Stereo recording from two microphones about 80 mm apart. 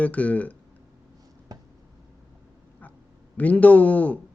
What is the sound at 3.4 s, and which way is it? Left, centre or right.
Speech, centre.